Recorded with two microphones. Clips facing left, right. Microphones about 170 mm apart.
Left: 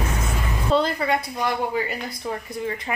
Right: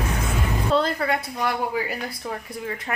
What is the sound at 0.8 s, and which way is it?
A woman's voice, centre (ahead or behind).